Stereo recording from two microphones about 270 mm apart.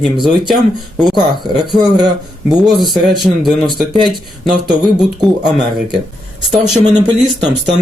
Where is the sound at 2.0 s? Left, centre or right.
Centre.